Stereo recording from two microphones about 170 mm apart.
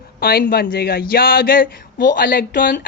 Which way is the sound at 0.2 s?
60° left (ahead or behind).